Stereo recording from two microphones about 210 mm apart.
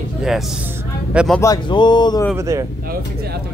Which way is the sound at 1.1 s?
Centre (ahead or behind).